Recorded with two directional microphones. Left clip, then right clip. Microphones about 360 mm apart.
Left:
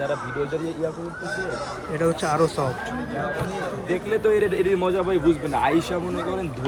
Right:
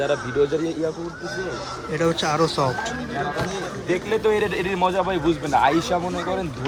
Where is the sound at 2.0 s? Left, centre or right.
Centre.